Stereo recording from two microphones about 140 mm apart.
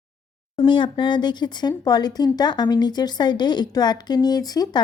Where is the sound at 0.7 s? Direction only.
35° left (ahead or behind).